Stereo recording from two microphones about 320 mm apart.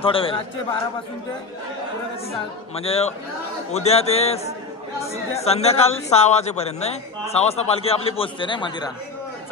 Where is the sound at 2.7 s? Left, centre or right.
Centre.